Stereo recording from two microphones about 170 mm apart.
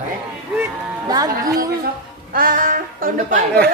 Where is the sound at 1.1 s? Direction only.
20° right (ahead or behind).